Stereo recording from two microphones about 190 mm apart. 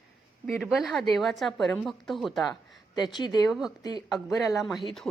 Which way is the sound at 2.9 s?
20° left (ahead or behind).